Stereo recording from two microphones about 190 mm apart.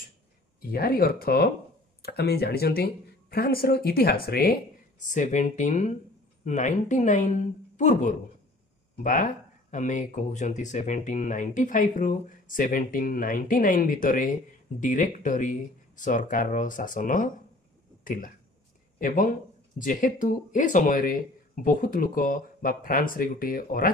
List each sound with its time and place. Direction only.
0.6 s speech: 50° left (ahead or behind)
5.0 s a woman's voice: 40° left (ahead or behind)